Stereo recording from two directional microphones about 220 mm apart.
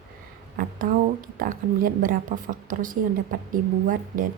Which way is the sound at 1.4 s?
40° right (ahead or behind).